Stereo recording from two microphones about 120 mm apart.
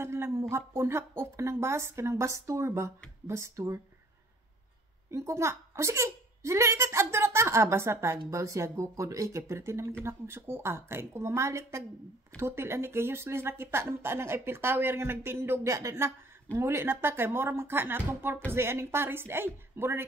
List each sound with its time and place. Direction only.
0.0 s a woman's voice: 20° right (ahead or behind)
5.1 s a woman's voice: 25° right (ahead or behind)